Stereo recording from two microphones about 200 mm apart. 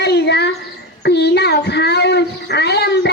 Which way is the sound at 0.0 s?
55° left (ahead or behind).